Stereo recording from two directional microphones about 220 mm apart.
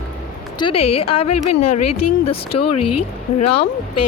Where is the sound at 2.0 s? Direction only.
90° left.